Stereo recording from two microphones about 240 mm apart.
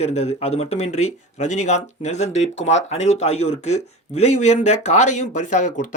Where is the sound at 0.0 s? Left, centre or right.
Left.